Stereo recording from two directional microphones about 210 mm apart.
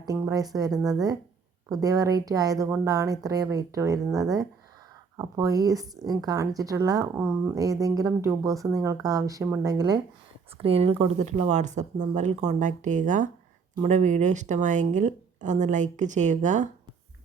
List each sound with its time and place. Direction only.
0.0 s a woman's voice: 15° right (ahead or behind)
10.6 s speech: 30° right (ahead or behind)